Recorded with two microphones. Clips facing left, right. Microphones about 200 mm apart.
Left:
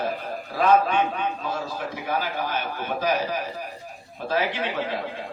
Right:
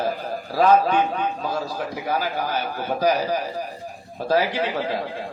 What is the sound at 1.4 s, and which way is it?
Speech, 40° right (ahead or behind).